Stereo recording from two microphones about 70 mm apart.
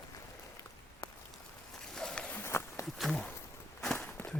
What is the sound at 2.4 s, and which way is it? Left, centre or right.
Walk, left.